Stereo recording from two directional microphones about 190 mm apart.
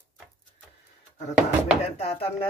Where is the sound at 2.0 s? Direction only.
30° left (ahead or behind).